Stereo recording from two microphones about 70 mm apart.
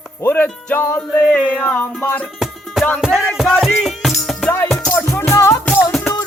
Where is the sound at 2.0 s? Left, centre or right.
Left.